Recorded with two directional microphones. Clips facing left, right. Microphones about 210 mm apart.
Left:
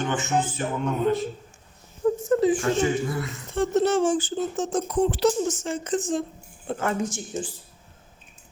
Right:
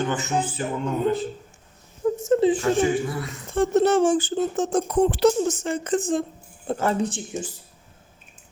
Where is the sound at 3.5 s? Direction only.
55° right (ahead or behind).